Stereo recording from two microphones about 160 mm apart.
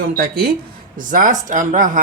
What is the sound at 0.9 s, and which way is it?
Speech, 55° right (ahead or behind).